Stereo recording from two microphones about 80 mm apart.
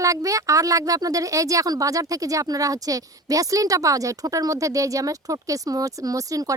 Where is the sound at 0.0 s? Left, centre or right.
Right.